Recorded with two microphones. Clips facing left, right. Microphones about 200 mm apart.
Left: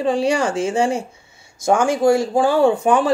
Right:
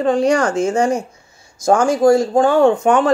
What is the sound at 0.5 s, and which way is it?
Speech, 25° left (ahead or behind).